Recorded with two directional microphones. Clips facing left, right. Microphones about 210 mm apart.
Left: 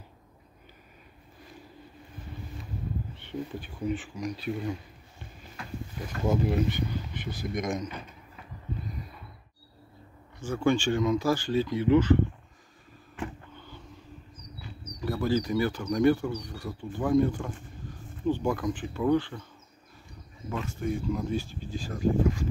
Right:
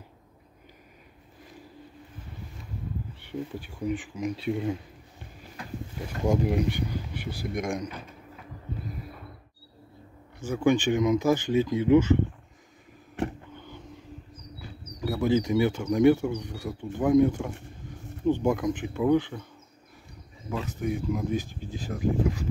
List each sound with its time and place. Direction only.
3.2 s speech: 10° right (ahead or behind)
6.1 s speech: 15° right (ahead or behind)
10.4 s speech: 15° right (ahead or behind)
13.6 s a sound: 15° right (ahead or behind)
15.0 s speech: 15° right (ahead or behind)
20.8 s speech: 10° right (ahead or behind)